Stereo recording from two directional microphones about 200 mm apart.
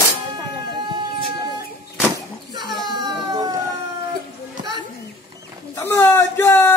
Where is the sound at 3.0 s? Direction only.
20° right (ahead or behind).